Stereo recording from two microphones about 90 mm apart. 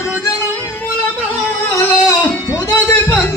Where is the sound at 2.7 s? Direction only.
25° left (ahead or behind).